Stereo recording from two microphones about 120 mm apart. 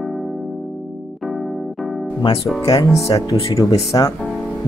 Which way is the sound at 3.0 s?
25° left (ahead or behind).